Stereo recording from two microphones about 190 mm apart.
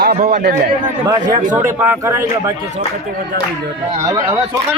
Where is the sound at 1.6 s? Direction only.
15° right (ahead or behind).